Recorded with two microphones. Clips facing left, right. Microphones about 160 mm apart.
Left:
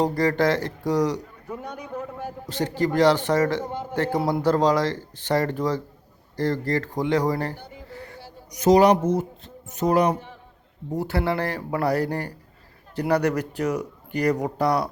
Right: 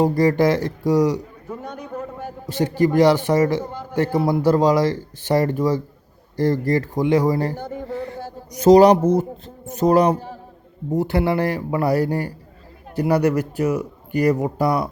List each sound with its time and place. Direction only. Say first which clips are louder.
0.0 s a man's voice: right 4 dB; 10° right (ahead or behind)
3.7 s a man's voice: left 2 dB; 25° left (ahead or behind)
4.2 s a man's voice: right 4 dB; centre (ahead or behind)
4.4 s a man's voice: right 4 dB; 10° right (ahead or behind)
7.5 s speech: right 12 dB; 45° right (ahead or behind)
8.5 s speech: right 5 dB; 35° right (ahead or behind)
10.9 s a man's voice: right 5 dB; 15° right (ahead or behind)